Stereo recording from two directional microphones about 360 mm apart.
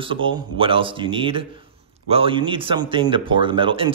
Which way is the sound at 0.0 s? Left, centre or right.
Centre.